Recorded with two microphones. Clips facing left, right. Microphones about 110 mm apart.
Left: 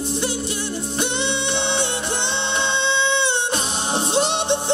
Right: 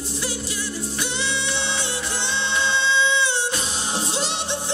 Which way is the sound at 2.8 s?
60° left (ahead or behind).